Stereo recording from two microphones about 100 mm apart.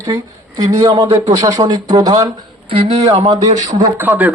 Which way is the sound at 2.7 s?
65° right (ahead or behind).